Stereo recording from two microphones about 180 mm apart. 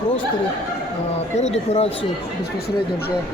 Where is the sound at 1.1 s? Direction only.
35° left (ahead or behind).